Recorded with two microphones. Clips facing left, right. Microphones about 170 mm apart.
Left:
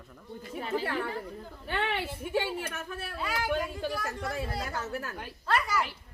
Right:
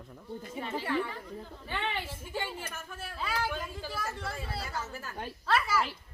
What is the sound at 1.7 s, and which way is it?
A woman's voice, 65° left (ahead or behind).